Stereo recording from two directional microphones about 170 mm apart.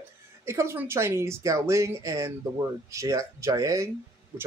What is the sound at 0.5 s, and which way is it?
Speech, 15° right (ahead or behind).